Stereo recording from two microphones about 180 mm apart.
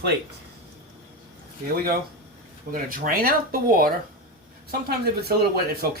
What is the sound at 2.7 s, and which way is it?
Speech, 55° right (ahead or behind).